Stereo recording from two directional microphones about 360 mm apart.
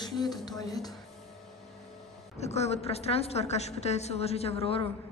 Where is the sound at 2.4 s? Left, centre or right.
Centre.